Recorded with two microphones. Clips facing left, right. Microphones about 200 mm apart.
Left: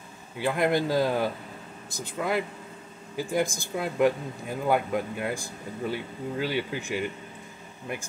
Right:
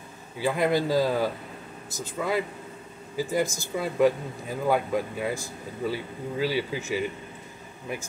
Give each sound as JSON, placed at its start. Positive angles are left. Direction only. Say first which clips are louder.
{"t": 0.4, "sound": "speech", "louder": "right 1 dB", "side_deg": 0}